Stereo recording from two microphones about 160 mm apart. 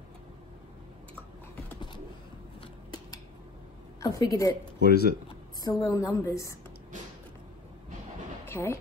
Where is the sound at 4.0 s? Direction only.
20° left (ahead or behind).